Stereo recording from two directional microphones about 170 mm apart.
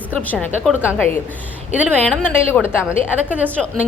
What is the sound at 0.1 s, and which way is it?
Speech, 10° left (ahead or behind).